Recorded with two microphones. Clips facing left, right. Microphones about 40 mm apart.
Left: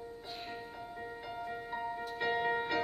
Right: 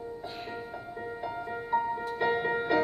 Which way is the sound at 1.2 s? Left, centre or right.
Centre.